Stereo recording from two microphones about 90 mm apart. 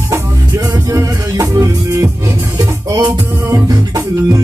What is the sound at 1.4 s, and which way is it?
Music, 40° right (ahead or behind).